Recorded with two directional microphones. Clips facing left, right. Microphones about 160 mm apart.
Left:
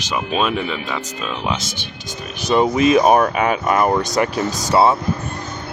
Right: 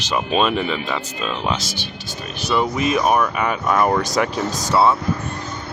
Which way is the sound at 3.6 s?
5° left (ahead or behind).